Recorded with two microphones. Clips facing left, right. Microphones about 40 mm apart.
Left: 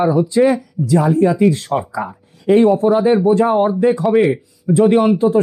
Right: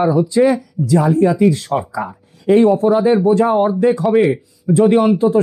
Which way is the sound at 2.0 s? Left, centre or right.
Centre.